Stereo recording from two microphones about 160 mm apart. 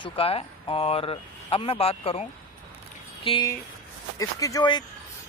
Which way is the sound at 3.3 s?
35° left (ahead or behind).